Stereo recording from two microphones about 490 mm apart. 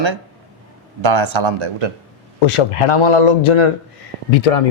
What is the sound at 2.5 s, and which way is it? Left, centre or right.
Speech, left.